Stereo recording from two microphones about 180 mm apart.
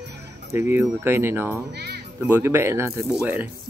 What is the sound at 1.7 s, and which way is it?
Music, 65° right (ahead or behind).